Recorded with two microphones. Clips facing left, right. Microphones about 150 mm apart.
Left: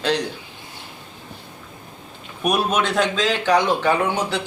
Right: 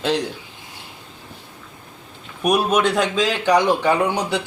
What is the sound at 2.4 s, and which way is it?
Speech, 10° right (ahead or behind).